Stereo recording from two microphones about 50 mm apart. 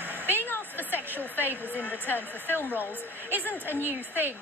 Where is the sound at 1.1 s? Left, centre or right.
Right.